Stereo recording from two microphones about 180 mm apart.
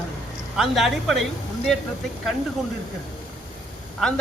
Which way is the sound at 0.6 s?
Centre (ahead or behind).